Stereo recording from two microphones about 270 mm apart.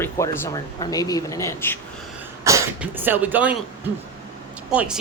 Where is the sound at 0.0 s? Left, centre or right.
Centre.